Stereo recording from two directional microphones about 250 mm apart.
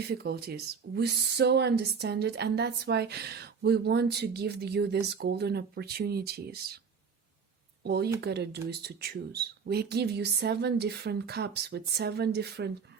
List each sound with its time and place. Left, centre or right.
0.0 s speech: right
7.9 s speech: right